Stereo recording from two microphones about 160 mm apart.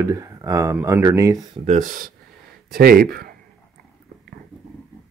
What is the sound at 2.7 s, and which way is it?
Speech, 70° right (ahead or behind).